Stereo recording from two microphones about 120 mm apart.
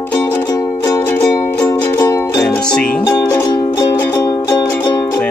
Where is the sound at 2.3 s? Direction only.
5° left (ahead or behind).